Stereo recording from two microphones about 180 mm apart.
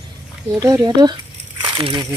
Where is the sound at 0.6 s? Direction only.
20° right (ahead or behind).